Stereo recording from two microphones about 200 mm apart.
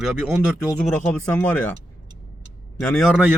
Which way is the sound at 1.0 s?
5° left (ahead or behind).